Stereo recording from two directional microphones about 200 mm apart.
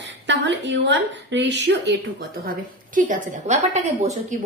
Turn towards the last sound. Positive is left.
turn(degrees=-35)  # may be behind; listen again after turning